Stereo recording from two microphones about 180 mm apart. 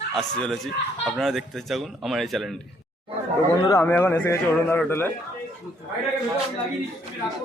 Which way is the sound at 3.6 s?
15° left (ahead or behind).